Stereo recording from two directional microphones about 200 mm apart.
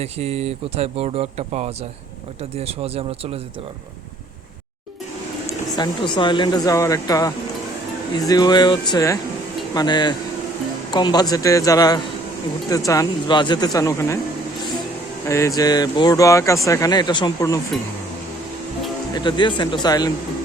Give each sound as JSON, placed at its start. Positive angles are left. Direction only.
{"t": 0.0, "sound": "speech", "side_deg": -30}
{"t": 5.5, "sound": "speech", "side_deg": 20}
{"t": 15.3, "sound": "speech", "side_deg": 15}
{"t": 19.1, "sound": "speech", "side_deg": 25}